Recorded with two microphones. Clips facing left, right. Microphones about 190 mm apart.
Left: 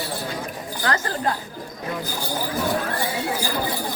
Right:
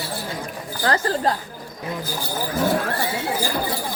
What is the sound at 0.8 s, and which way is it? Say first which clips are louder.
Speech: right 3 dB; 35° right (ahead or behind).